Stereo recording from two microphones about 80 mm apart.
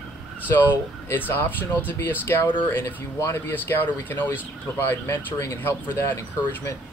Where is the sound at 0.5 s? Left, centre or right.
Left.